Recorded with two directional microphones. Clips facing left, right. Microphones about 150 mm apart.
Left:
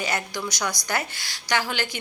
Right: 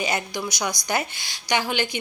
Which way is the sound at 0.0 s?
15° right (ahead or behind).